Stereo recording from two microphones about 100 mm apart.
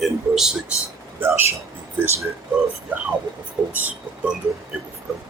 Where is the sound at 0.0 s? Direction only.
5° right (ahead or behind).